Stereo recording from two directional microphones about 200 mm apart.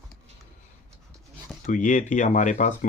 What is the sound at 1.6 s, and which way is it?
Speech, 40° left (ahead or behind).